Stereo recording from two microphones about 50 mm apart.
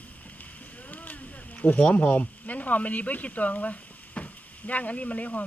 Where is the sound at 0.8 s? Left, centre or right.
Left.